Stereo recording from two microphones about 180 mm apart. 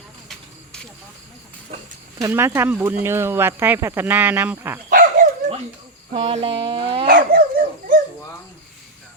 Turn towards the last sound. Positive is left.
turn(degrees=-50)  # may be behind; listen again after turning